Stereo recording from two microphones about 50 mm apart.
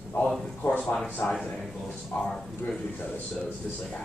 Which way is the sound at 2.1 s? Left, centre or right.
Left.